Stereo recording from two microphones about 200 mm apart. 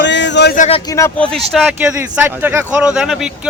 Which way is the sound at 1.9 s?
10° right (ahead or behind).